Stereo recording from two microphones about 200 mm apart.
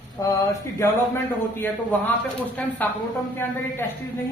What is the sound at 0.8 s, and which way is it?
A man's voice, 10° left (ahead or behind).